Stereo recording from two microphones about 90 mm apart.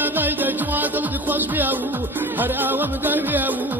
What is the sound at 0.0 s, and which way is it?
Music, 20° right (ahead or behind).